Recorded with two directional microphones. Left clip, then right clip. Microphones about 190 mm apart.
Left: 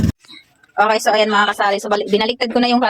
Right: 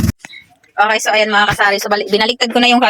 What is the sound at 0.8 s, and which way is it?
Speech, 10° left (ahead or behind).